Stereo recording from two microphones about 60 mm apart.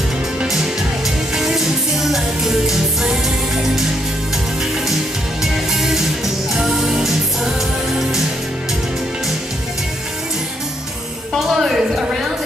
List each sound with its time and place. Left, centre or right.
1.3 s music: centre
5.4 s music: centre
11.3 s a sound: centre